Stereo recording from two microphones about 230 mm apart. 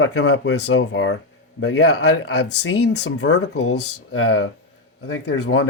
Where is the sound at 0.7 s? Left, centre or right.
Left.